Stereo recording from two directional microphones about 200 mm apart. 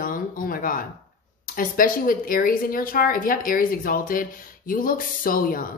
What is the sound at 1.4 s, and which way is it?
Speech, 45° left (ahead or behind).